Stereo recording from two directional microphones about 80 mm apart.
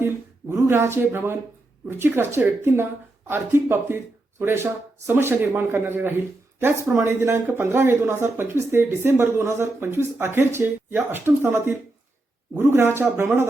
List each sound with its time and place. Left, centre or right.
0.4 s a woman's voice: right